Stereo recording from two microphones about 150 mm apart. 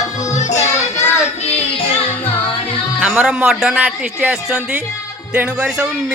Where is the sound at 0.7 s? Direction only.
50° left (ahead or behind).